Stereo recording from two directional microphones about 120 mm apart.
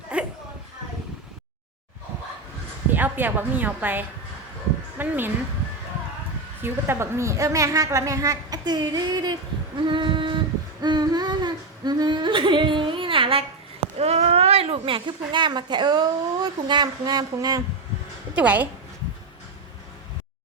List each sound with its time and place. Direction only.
0.1 s a sound: 10° right (ahead or behind)
2.9 s a woman's voice: 15° right (ahead or behind)
6.6 s a woman's voice: 20° right (ahead or behind); by 9.3 s 35° right (ahead or behind)
9.7 s female singing: 40° right (ahead or behind)
10.8 s humming: 35° right (ahead or behind)
14.0 s speech: 60° right (ahead or behind); by 17.6 s 35° right (ahead or behind)
18.3 s a woman's voice: 15° right (ahead or behind)